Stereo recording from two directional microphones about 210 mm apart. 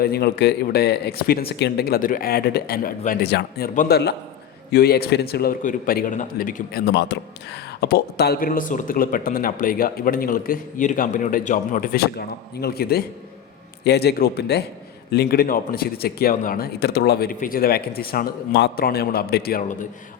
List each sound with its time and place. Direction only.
0.0 s a man's voice: 50° left (ahead or behind)